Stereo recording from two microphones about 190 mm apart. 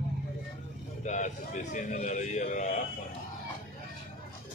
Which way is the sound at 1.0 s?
40° left (ahead or behind).